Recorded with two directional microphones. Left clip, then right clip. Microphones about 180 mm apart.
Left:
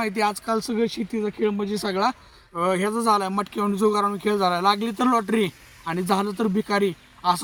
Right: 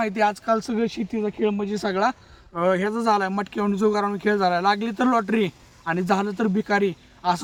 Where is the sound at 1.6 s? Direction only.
25° right (ahead or behind).